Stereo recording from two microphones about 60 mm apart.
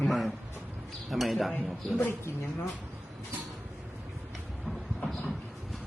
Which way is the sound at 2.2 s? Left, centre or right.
Left.